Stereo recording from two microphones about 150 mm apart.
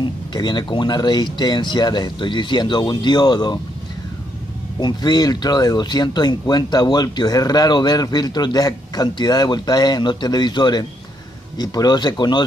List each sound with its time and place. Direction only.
0.0 s speech: 30° left (ahead or behind)
4.7 s speech: 30° left (ahead or behind)